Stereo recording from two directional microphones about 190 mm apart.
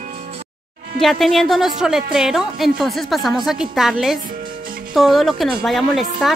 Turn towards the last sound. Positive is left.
turn(degrees=0)  # may be behind; listen again after turning